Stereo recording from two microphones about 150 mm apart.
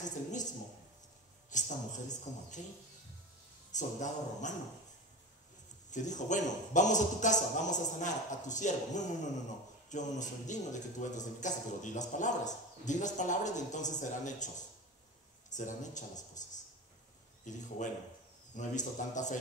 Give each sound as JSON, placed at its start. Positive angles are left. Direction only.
{"t": 1.5, "sound": "a man's voice", "side_deg": 55}
{"t": 3.7, "sound": "a man's voice", "side_deg": 55}
{"t": 5.9, "sound": "a man's voice", "side_deg": 55}
{"t": 15.5, "sound": "a man's voice", "side_deg": 55}